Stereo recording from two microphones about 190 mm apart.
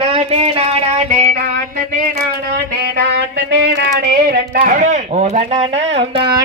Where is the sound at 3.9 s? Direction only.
60° right (ahead or behind); by 6.4 s 25° right (ahead or behind).